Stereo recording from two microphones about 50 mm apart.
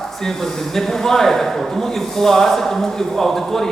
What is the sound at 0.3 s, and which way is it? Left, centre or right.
Speech, centre.